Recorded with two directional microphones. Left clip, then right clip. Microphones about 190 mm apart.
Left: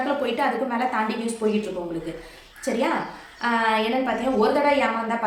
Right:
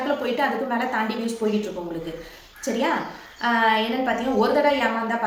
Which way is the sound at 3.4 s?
5° left (ahead or behind).